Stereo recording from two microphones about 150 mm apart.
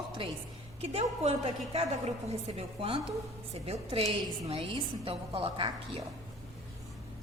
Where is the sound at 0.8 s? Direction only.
45° right (ahead or behind).